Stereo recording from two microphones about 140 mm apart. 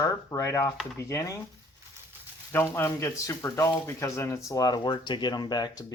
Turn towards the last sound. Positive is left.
turn(degrees=30)  # may be behind; listen again after turning